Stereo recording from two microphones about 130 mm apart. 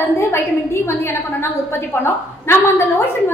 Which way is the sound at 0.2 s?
20° left (ahead or behind).